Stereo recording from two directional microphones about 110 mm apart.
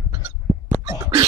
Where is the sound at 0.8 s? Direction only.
25° right (ahead or behind).